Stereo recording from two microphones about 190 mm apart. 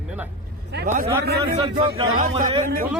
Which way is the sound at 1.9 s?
50° right (ahead or behind).